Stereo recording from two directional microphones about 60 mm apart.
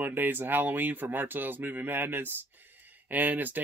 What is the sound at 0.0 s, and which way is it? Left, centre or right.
Speech, right.